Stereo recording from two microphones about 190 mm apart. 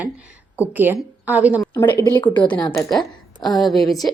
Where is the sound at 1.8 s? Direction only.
20° left (ahead or behind).